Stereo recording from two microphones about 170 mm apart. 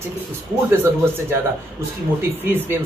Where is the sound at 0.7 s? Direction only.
15° right (ahead or behind).